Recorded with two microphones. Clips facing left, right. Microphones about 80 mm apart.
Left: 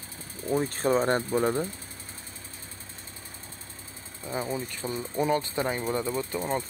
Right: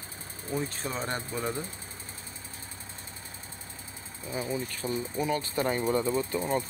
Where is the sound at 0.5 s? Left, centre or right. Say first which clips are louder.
Left 8 dB; left.